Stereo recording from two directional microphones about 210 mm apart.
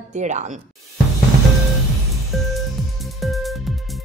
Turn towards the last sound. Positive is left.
turn(degrees=0)  # may be behind; listen again after turning